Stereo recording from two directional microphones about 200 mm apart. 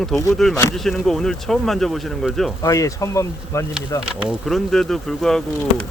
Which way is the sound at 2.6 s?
15° left (ahead or behind).